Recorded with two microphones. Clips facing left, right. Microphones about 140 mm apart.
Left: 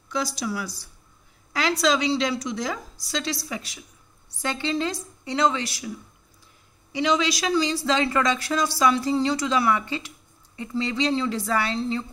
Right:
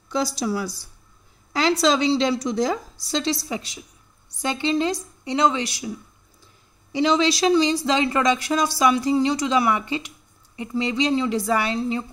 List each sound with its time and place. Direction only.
0.1 s a woman's voice: 35° right (ahead or behind); by 5.9 s 20° right (ahead or behind)
6.9 s speech: 30° right (ahead or behind); by 12.1 s 15° right (ahead or behind)